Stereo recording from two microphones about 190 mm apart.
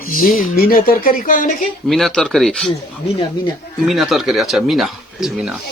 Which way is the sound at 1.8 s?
Centre (ahead or behind).